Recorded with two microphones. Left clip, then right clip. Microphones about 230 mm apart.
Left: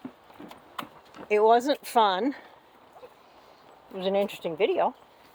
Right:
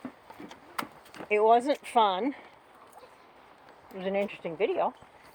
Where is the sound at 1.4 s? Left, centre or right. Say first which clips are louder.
Left 2 dB; centre.